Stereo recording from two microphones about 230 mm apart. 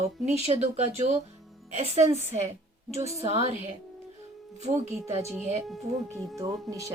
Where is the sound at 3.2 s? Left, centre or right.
Right.